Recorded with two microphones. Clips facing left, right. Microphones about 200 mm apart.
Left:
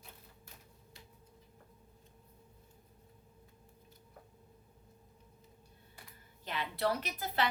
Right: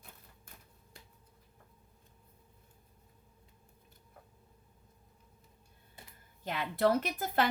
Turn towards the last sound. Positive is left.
turn(degrees=-50)  # may be behind; listen again after turning